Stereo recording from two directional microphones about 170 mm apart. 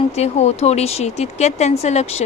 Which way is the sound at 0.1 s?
40° left (ahead or behind).